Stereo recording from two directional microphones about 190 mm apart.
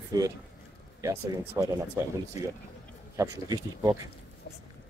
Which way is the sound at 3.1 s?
20° right (ahead or behind).